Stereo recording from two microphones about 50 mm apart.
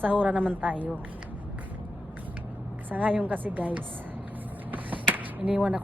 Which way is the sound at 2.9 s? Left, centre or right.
Right.